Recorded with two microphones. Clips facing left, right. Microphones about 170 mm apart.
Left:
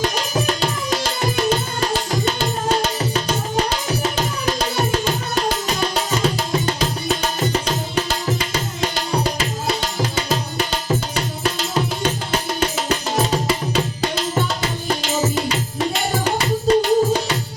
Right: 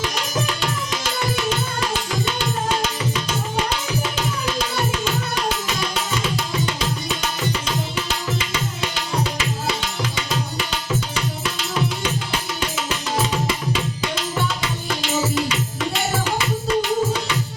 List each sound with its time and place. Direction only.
0.0 s music: 40° left (ahead or behind)
1.4 s tabla: 40° left (ahead or behind)
3.8 s music: 40° left (ahead or behind)
14.2 s tabla: 40° left (ahead or behind)
15.4 s music: 35° left (ahead or behind)